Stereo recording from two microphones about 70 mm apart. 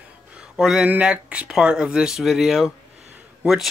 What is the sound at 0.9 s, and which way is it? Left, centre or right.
Speech, centre.